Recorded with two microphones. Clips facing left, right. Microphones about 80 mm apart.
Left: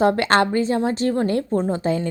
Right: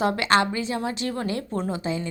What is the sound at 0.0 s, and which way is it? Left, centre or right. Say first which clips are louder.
A woman's voice: left 4 dB; left.